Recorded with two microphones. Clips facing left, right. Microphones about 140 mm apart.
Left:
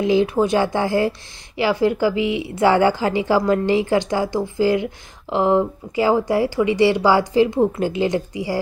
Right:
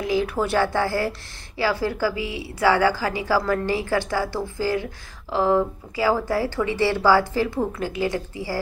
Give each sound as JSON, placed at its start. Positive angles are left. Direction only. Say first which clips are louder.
{"t": 0.0, "sound": "a woman's voice", "louder": "left 6 dB", "side_deg": 25}